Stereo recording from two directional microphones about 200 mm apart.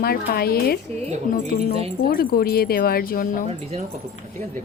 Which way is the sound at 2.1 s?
50° left (ahead or behind).